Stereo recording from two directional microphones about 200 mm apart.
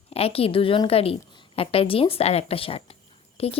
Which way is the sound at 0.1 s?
30° left (ahead or behind).